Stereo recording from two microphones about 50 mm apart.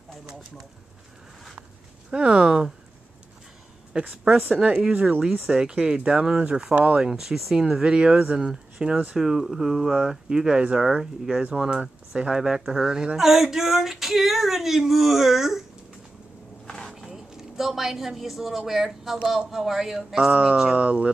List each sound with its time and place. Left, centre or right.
2.0 s speech: centre
4.1 s speech: centre
4.7 s speech: right
5.5 s speech: centre
7.1 s speech: centre
9.9 s speech: centre
16.6 s a sound: centre
16.9 s a sound: centre
18.7 s speech: centre
20.7 s speech: right